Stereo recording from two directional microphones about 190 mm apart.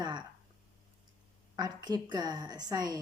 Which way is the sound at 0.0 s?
25° right (ahead or behind).